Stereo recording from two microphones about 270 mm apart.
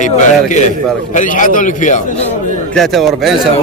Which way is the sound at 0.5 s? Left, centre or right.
Left.